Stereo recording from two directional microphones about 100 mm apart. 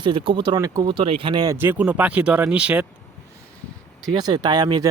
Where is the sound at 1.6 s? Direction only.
20° right (ahead or behind).